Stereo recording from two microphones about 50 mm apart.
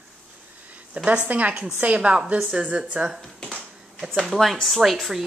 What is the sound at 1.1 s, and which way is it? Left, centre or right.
Speech, right.